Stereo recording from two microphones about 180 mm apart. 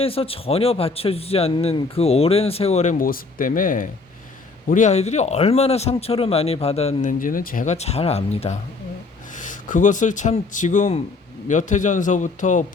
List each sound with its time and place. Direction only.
0.0 s a man's voice: 30° left (ahead or behind)
3.0 s a man's voice: 50° left (ahead or behind)